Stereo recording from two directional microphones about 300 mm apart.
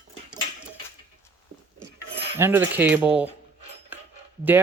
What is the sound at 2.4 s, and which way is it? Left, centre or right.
Speech, centre.